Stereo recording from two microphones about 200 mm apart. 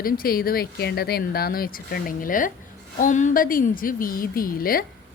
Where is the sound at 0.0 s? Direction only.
45° left (ahead or behind).